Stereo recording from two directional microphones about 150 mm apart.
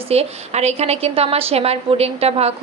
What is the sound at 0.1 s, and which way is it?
A woman's voice, 45° right (ahead or behind).